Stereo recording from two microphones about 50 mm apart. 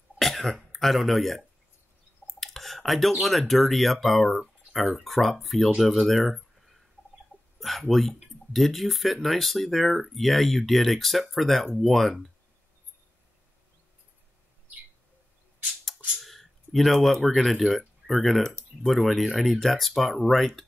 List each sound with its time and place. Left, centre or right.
0.2 s cough: centre
0.6 s speech: centre
7.3 s a sound: right
7.9 s speech: centre
16.2 s a sound: centre
17.4 s speech: centre